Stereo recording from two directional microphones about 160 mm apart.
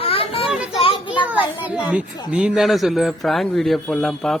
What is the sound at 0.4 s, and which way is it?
Children playing, 5° right (ahead or behind).